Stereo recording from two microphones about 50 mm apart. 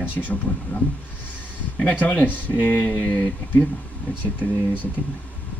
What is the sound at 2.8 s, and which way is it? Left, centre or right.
Speech, left.